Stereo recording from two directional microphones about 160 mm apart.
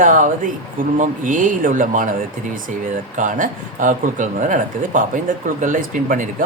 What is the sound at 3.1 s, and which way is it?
Speech, 55° right (ahead or behind).